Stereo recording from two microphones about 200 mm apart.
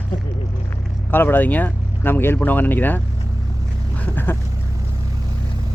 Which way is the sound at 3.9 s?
10° left (ahead or behind).